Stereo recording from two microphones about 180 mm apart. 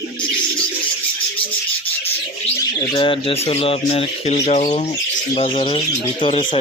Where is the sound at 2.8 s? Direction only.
25° left (ahead or behind).